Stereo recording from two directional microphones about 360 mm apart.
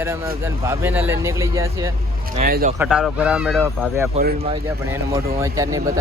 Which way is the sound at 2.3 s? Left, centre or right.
Right.